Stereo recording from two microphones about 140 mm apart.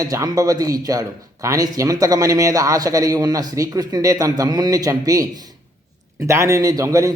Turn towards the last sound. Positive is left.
turn(degrees=-20)  # may be behind; listen again after turning